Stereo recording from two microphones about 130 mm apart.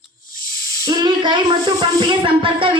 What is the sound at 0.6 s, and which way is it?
Hiss, 25° left (ahead or behind).